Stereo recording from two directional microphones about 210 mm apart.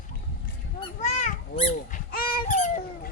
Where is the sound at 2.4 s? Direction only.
35° left (ahead or behind).